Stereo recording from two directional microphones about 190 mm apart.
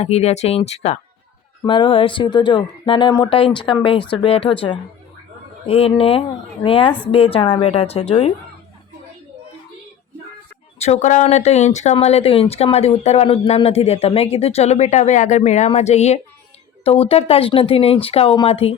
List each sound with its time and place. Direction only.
0.0 s speech: 35° left (ahead or behind)
10.8 s speech: 35° left (ahead or behind)